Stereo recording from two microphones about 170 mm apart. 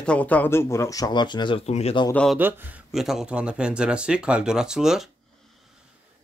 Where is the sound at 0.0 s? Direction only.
5° left (ahead or behind); by 1.6 s 25° left (ahead or behind).